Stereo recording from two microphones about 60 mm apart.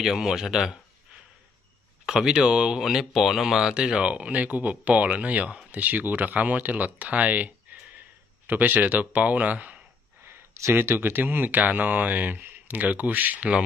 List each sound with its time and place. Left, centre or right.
0.0 s speech: centre
2.0 s speech: centre
10.2 s a sound: right
10.7 s speech: right